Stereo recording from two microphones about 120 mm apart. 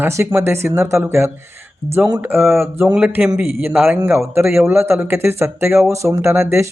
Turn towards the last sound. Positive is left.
turn(degrees=-20)  # may be behind; listen again after turning